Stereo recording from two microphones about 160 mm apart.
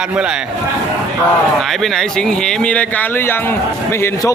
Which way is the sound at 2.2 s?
5° left (ahead or behind).